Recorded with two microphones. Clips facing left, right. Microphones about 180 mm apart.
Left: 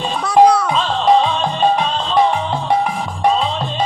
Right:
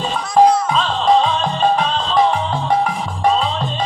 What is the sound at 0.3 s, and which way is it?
Music, 65° left (ahead or behind).